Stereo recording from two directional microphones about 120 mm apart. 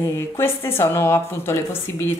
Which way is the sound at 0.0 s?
20° left (ahead or behind).